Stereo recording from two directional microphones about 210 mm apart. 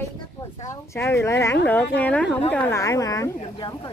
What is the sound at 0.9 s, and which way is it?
A woman's voice, 10° left (ahead or behind).